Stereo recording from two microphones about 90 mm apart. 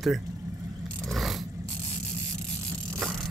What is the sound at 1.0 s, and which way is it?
Vehicle, centre (ahead or behind).